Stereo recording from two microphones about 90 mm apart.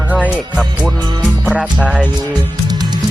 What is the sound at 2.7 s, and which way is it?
Music, 50° right (ahead or behind).